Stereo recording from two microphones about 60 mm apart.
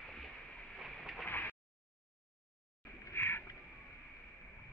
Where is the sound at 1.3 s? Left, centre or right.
Left.